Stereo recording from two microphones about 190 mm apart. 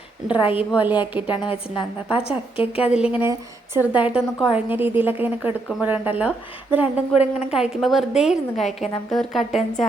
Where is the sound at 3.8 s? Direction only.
10° right (ahead or behind).